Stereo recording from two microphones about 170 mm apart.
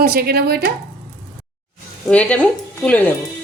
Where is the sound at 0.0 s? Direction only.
65° right (ahead or behind).